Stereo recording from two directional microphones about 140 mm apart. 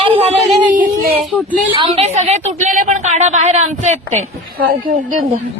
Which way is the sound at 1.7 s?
35° right (ahead or behind).